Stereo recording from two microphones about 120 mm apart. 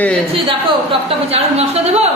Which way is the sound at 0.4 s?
50° right (ahead or behind).